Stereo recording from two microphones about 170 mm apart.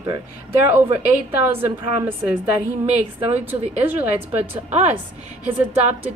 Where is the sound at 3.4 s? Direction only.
10° right (ahead or behind).